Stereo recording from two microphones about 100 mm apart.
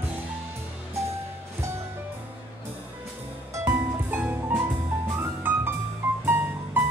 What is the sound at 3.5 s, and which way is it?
Music, 25° right (ahead or behind).